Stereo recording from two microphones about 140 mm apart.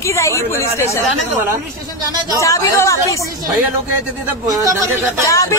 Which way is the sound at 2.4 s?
20° left (ahead or behind).